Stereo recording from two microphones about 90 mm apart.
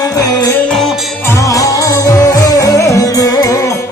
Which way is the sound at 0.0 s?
40° left (ahead or behind).